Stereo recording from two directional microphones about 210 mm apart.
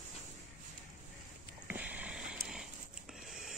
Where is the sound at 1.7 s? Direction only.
5° right (ahead or behind).